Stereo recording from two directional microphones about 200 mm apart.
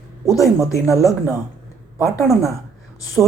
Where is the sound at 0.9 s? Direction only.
15° left (ahead or behind).